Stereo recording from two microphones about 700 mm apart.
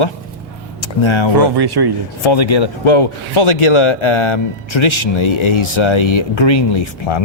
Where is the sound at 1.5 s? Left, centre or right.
Right.